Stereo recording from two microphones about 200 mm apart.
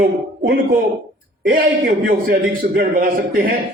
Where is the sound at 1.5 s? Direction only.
45° right (ahead or behind).